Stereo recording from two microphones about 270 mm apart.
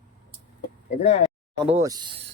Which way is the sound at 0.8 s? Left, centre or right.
Left.